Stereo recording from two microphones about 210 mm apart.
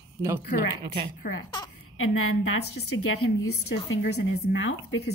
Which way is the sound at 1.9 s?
80° left.